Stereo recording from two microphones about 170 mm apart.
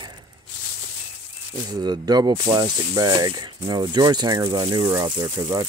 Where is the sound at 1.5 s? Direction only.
25° right (ahead or behind).